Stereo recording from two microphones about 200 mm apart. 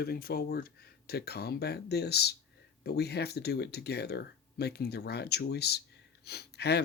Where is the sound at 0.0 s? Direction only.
50° left (ahead or behind).